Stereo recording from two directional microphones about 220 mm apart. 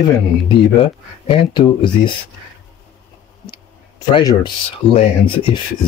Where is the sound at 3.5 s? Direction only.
20° left (ahead or behind).